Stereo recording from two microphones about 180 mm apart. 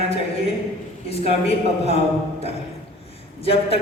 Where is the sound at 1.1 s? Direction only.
35° left (ahead or behind).